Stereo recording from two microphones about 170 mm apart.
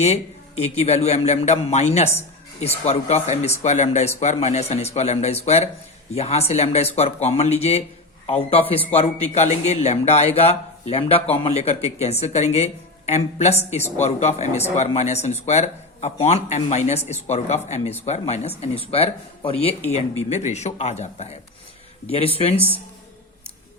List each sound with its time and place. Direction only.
0.0 s speech: 40° left (ahead or behind)